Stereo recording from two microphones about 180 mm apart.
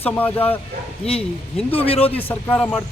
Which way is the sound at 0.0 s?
10° left (ahead or behind).